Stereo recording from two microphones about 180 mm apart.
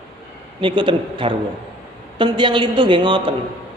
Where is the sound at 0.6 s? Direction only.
25° right (ahead or behind).